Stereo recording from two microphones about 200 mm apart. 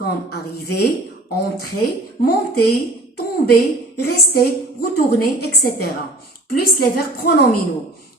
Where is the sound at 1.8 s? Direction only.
50° left (ahead or behind).